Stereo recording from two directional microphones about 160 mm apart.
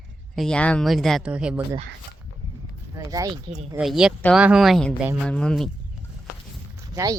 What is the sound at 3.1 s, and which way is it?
Speech, 20° right (ahead or behind).